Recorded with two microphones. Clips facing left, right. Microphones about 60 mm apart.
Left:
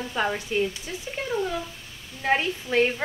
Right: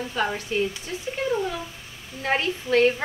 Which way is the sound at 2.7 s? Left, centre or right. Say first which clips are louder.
Right 4 dB; centre.